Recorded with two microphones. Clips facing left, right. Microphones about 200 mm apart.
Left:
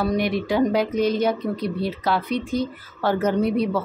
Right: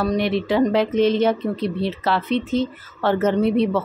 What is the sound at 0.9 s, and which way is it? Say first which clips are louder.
Speech: right 3 dB; 25° right (ahead or behind).